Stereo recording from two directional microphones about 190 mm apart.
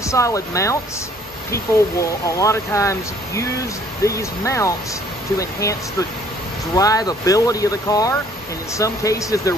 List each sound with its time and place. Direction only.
0.0 s speech: 15° left (ahead or behind)